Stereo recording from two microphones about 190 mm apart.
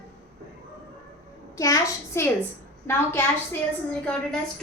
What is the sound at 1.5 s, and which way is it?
A woman's voice, 15° left (ahead or behind).